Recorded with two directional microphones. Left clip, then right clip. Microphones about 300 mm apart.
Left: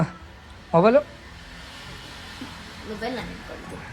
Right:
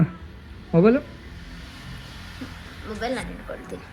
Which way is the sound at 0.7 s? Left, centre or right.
Right.